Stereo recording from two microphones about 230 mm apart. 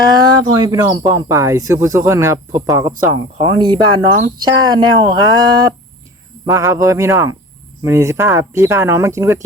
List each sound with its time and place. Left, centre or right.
0.1 s speech: centre